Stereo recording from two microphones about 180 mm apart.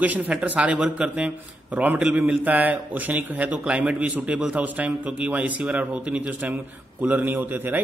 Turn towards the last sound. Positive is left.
turn(degrees=-10)  # may be behind; listen again after turning